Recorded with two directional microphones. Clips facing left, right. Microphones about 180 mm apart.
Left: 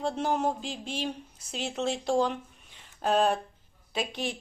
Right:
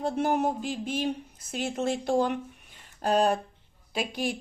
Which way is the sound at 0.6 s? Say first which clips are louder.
Right 4 dB; 50° right (ahead or behind).